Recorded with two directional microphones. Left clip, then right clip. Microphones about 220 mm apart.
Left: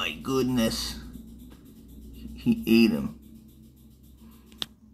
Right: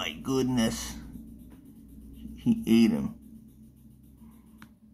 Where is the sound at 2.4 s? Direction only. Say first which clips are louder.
Left 2 dB; 25° right (ahead or behind).